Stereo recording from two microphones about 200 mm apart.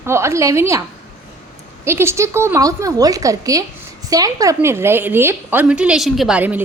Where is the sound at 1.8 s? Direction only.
10° right (ahead or behind).